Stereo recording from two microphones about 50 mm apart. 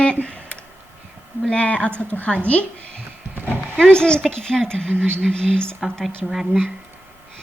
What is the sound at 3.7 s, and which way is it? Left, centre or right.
Speech, centre.